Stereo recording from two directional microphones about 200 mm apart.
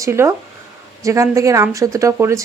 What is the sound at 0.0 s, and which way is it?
Speech, 15° right (ahead or behind).